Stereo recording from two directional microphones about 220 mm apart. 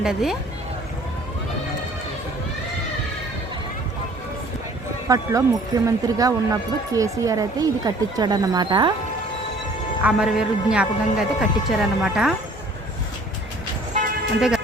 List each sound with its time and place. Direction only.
0.0 s a man's voice: centre (ahead or behind)
5.0 s speech: 15° right (ahead or behind)
10.0 s a man's voice: 5° right (ahead or behind)